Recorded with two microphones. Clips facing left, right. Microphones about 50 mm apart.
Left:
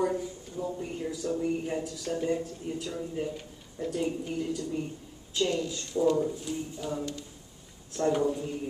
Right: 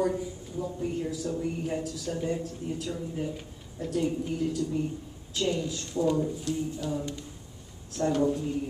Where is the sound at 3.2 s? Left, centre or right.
Centre.